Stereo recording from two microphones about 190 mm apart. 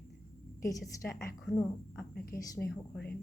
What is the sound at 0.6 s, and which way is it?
A woman's voice, 15° left (ahead or behind).